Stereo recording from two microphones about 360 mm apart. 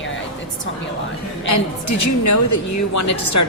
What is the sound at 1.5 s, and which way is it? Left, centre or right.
A woman's voice, left.